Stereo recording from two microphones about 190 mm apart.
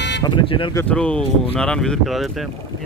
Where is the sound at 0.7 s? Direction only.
10° left (ahead or behind).